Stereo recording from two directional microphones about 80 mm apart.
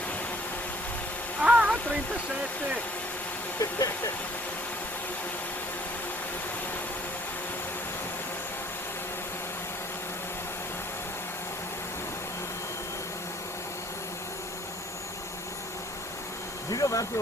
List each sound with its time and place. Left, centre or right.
1.4 s a sound: centre
3.6 s speech: left
16.7 s speech: left